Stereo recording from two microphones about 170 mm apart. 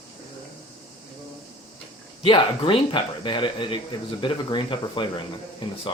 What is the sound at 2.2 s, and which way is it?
Speech, 30° left (ahead or behind).